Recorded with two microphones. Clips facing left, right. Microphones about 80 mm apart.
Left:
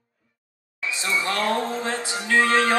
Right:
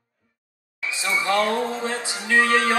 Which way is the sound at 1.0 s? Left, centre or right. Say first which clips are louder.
Right 3 dB; right.